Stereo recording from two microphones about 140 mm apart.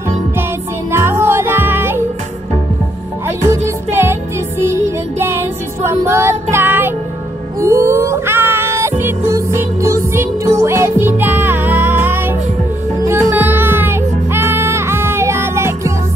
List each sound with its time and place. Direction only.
0.9 s music: 15° right (ahead or behind)
3.3 s music: 20° right (ahead or behind)